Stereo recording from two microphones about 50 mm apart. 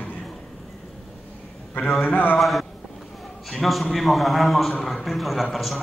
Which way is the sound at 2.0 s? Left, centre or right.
Left.